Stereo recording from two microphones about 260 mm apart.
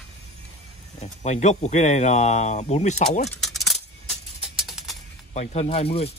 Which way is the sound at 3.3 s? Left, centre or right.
Centre.